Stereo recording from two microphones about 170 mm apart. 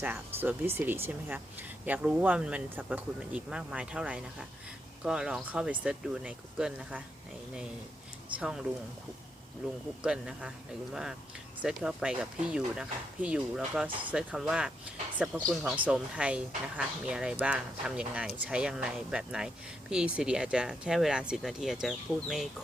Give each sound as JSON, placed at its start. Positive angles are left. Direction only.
{"t": 0.0, "sound": "speech", "side_deg": -10}
{"t": 8.4, "sound": "speech", "side_deg": -5}
{"t": 10.0, "sound": "speech", "side_deg": -5}
{"t": 11.6, "sound": "speech", "side_deg": -5}
{"t": 15.7, "sound": "speech", "side_deg": -5}